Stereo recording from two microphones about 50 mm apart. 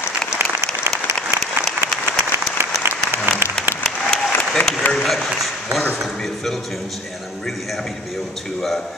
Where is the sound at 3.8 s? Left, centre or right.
Centre.